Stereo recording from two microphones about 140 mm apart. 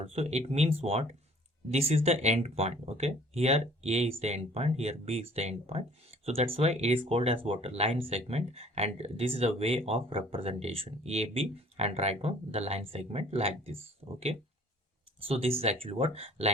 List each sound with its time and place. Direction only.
0.0 s speech: 45° right (ahead or behind)